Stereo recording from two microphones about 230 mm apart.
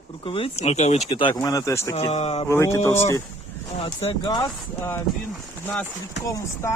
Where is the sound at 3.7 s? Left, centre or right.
Left.